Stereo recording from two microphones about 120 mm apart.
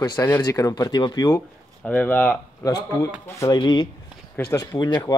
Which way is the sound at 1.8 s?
15° left (ahead or behind).